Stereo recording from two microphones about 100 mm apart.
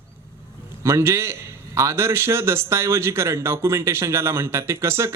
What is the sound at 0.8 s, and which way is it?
A man's voice, 30° right (ahead or behind).